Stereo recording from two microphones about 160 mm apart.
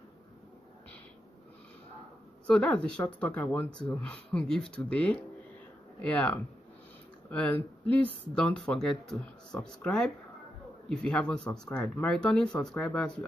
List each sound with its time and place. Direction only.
2.4 s speech: 5° left (ahead or behind)